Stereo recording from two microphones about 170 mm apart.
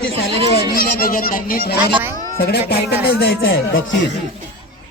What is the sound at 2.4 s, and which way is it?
Speech, 70° left (ahead or behind).